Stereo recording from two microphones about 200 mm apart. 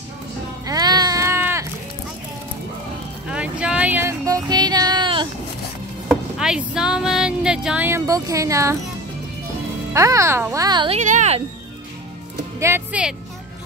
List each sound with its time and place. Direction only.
0.7 s a sound: 20° right (ahead or behind)
3.3 s a sound: 5° right (ahead or behind); by 5.3 s 25° right (ahead or behind)
6.0 s speech: centre (ahead or behind)
9.9 s speech: 15° right (ahead or behind)
11.0 s speech: 35° right (ahead or behind)
12.5 s music: 10° right (ahead or behind)